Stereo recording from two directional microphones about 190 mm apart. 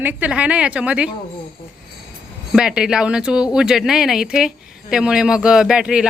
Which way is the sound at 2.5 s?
5° right (ahead or behind).